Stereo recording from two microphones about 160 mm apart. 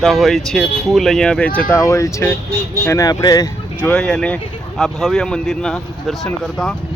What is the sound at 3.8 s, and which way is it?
Speech, 5° left (ahead or behind).